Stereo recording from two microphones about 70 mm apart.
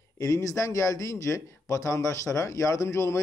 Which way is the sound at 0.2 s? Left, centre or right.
Left.